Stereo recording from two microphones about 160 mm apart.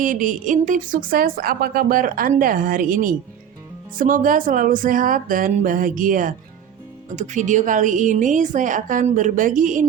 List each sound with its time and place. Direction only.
0.0 s a woman's voice: 55° right (ahead or behind)